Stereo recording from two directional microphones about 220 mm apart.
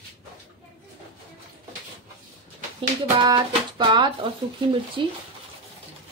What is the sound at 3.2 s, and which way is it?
Speech, 20° right (ahead or behind).